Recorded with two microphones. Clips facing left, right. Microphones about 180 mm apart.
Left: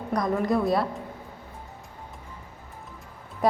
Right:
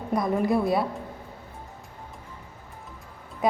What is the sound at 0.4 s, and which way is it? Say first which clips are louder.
Speech: left 1 dB; 5° right (ahead or behind).